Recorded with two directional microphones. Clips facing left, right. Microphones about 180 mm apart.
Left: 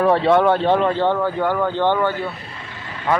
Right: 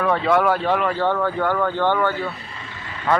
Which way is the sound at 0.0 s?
30° left (ahead or behind).